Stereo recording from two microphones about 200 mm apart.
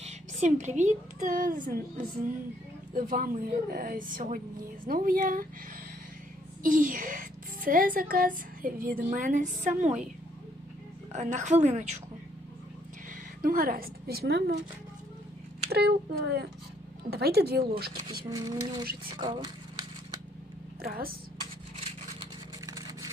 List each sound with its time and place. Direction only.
0.0 s speech: 35° right (ahead or behind)
6.6 s a woman's voice: 45° right (ahead or behind)
11.1 s a woman's voice: 35° right (ahead or behind)
13.4 s speech: 45° right (ahead or behind)
15.7 s speech: 55° right (ahead or behind)
18.3 s speech: 20° right (ahead or behind)
20.8 s speech: 50° right (ahead or behind)